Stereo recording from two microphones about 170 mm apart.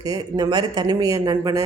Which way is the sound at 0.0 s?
20° right (ahead or behind).